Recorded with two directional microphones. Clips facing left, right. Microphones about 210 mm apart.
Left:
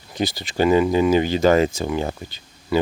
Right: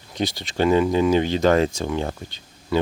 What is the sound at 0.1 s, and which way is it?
Speech, centre (ahead or behind).